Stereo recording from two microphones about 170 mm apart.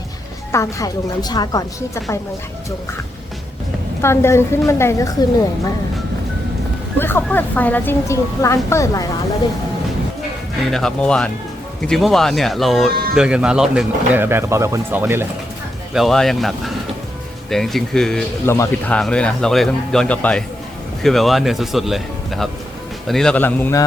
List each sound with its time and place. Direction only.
0.5 s a woman's voice: 20° left (ahead or behind)
4.0 s a woman's voice: 15° left (ahead or behind)
7.0 s a woman's voice: 10° left (ahead or behind)
10.7 s speech: 5° left (ahead or behind); by 15.3 s 15° right (ahead or behind)
15.9 s speech: centre (ahead or behind)
18.4 s a woman's voice: 15° left (ahead or behind)